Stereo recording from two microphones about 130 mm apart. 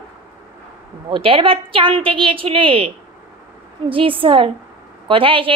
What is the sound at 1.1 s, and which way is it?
A woman's voice, 45° right (ahead or behind).